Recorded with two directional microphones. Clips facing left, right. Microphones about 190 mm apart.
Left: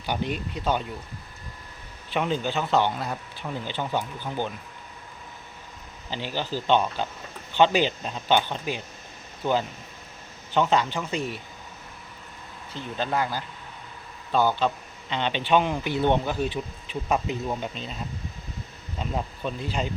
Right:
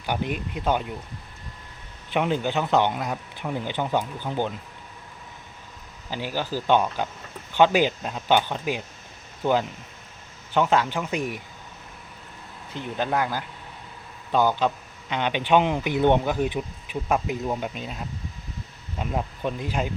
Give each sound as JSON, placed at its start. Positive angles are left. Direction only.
{"t": 0.0, "sound": "speech", "side_deg": -10}
{"t": 2.1, "sound": "speech", "side_deg": -15}
{"t": 6.1, "sound": "speech", "side_deg": -10}
{"t": 12.7, "sound": "speech", "side_deg": -15}
{"t": 18.9, "sound": "speech", "side_deg": -10}